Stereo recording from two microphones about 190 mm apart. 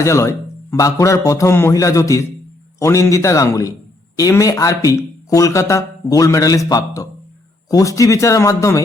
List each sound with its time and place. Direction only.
0.0 s speech: 15° left (ahead or behind)